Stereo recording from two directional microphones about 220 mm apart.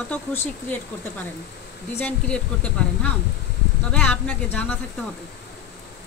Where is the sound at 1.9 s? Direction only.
5° left (ahead or behind).